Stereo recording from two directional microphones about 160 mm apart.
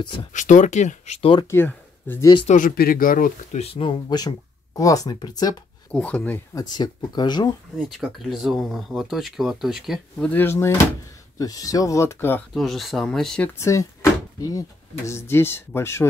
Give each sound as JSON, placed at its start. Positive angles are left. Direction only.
{"t": 0.0, "sound": "speech", "side_deg": 30}
{"t": 0.3, "sound": "speech", "side_deg": 50}
{"t": 1.5, "sound": "speech", "side_deg": 15}
{"t": 2.4, "sound": "speech", "side_deg": 55}
{"t": 3.5, "sound": "speech", "side_deg": 35}
{"t": 5.9, "sound": "speech", "side_deg": 10}
{"t": 6.5, "sound": "speech", "side_deg": 25}
{"t": 7.7, "sound": "speech", "side_deg": 0}
{"t": 12.5, "sound": "speech", "side_deg": 0}
{"t": 13.6, "sound": "speech", "side_deg": 20}
{"t": 15.0, "sound": "speech", "side_deg": 15}